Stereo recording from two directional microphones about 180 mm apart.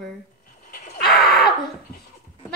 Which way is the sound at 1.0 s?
Centre (ahead or behind).